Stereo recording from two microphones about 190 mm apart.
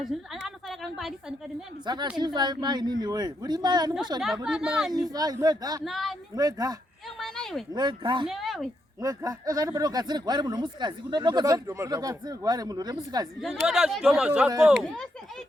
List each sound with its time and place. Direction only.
0.0 s a sound: centre (ahead or behind)
2.1 s speech: 25° right (ahead or behind)
4.4 s speech: 5° right (ahead or behind)
4.9 s speech: 20° right (ahead or behind)
5.8 s speech: centre (ahead or behind)
6.3 s speech: 20° right (ahead or behind)
7.2 s a sound: centre (ahead or behind)
7.7 s speech: 25° right (ahead or behind)
8.3 s speech: centre (ahead or behind)
9.0 s speech: 20° right (ahead or behind)
13.4 s speech: 5° right (ahead or behind)